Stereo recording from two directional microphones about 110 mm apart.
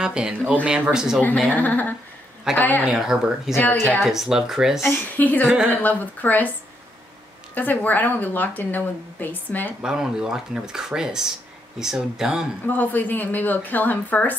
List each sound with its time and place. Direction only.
0.0 s speech: 10° right (ahead or behind)
1.5 s a woman's voice: 15° left (ahead or behind)
2.9 s speech: 5° right (ahead or behind)
3.5 s speech: 20° left (ahead or behind)
4.0 s speech: 5° right (ahead or behind)
4.8 s a woman's voice: 15° left (ahead or behind)
5.5 s speech: 15° right (ahead or behind)
5.8 s a woman's voice: 15° left (ahead or behind)
7.5 s a woman's voice: 15° left (ahead or behind)
9.8 s speech: 5° right (ahead or behind)
12.6 s a woman's voice: 15° left (ahead or behind)